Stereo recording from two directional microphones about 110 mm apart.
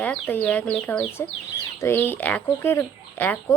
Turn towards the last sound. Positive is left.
turn(degrees=15)  # may be behind; listen again after turning